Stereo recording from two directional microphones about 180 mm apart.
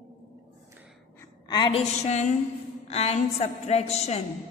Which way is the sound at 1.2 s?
20° left (ahead or behind).